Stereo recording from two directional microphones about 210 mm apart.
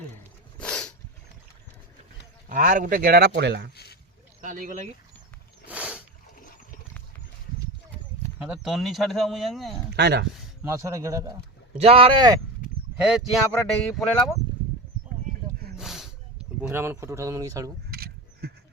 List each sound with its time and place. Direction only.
0.6 s a sound: 5° left (ahead or behind)
2.5 s a man's voice: 40° right (ahead or behind); by 3.7 s 55° right (ahead or behind)
4.4 s speech: 40° right (ahead or behind)
5.6 s a sound: 5° right (ahead or behind)
6.4 s toilet flush: 40° left (ahead or behind)
8.4 s speech: 5° right (ahead or behind)
9.9 s speech: 50° right (ahead or behind)
10.6 s speech: 15° right (ahead or behind)
11.8 s speech: 25° right (ahead or behind)
13.0 s speech: 5° right (ahead or behind)
15.8 s a sound: centre (ahead or behind)
17.9 s a sound: 50° right (ahead or behind)